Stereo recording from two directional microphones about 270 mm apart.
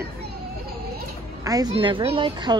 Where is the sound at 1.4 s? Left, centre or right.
Centre.